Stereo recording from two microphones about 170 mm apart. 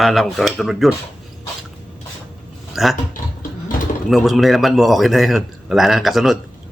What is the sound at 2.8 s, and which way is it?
Speech, centre (ahead or behind).